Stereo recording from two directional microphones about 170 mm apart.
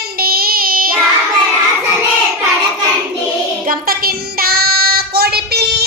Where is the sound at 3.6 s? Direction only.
60° right (ahead or behind).